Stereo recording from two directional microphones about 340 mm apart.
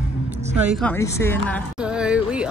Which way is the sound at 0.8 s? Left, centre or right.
Centre.